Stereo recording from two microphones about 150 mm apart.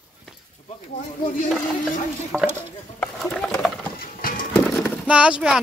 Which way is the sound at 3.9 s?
70° left (ahead or behind).